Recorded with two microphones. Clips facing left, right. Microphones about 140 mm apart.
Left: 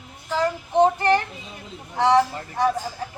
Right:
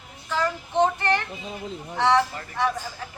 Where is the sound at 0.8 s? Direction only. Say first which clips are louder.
Left 4 dB; 35° left (ahead or behind).